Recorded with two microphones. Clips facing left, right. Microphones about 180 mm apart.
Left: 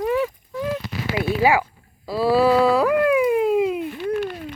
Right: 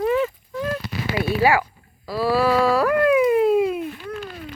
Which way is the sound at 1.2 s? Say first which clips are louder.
Even; 20° left (ahead or behind).